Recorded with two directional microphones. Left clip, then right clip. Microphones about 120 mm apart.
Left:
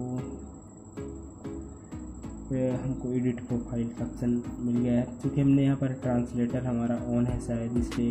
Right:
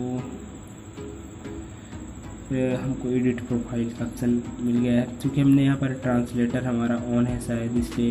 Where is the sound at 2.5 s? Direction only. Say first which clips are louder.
Right 4 dB; 40° left (ahead or behind).